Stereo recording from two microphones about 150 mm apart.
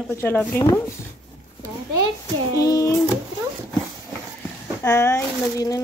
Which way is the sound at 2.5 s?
25° left (ahead or behind).